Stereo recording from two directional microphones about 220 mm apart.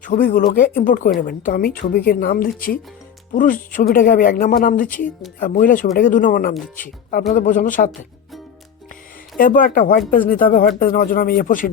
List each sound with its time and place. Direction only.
0.0 s speech: 40° left (ahead or behind)
9.4 s speech: 40° left (ahead or behind)